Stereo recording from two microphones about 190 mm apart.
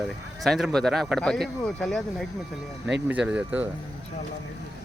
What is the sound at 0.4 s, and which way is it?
Speech, centre (ahead or behind).